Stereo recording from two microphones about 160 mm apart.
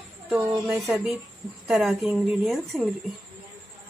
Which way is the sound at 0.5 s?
15° right (ahead or behind).